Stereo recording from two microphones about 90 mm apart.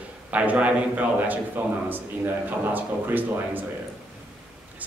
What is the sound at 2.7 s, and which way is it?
Speech, 20° right (ahead or behind).